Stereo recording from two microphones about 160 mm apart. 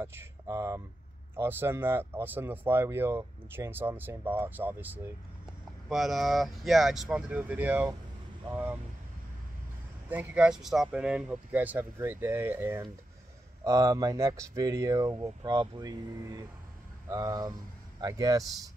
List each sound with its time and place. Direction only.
0.0 s speech: 15° right (ahead or behind)
5.9 s speech: centre (ahead or behind)
10.0 s speech: 10° right (ahead or behind)